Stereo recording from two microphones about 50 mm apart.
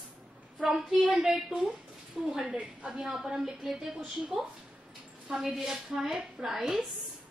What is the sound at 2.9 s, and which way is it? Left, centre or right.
A woman's voice, centre.